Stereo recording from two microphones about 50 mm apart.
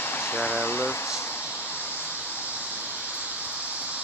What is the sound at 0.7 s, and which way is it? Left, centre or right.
Speech, left.